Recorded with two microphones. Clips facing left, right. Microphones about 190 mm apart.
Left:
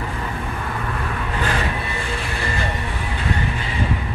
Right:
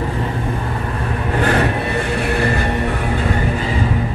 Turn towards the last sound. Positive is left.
turn(degrees=-60)  # may be behind; listen again after turning